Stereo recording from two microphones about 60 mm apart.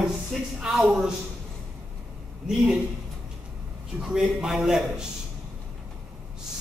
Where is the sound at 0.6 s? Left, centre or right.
Centre.